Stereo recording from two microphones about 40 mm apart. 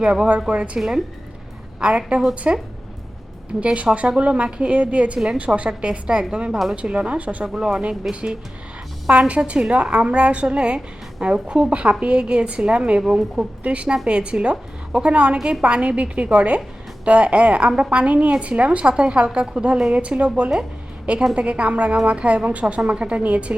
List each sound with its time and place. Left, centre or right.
0.3 s a woman's voice: right
0.8 s speech: centre
1.8 s a woman's voice: right
3.6 s a woman's voice: right
7.4 s a woman's voice: centre
13.1 s speech: centre
13.6 s a woman's voice: right